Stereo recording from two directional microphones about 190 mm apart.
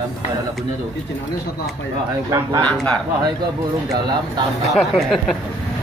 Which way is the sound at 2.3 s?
20° right (ahead or behind).